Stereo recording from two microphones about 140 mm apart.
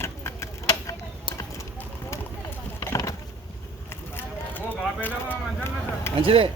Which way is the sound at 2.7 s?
25° left (ahead or behind).